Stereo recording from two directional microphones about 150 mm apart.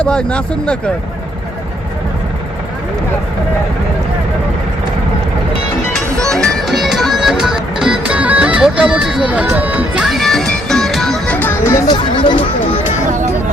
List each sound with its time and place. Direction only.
0.0 s speech: 5° left (ahead or behind)
6.3 s music: centre (ahead or behind)
11.3 s music: 15° left (ahead or behind)
11.9 s speech: 30° left (ahead or behind)